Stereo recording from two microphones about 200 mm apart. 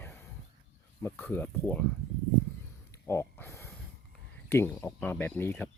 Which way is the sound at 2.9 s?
15° left (ahead or behind).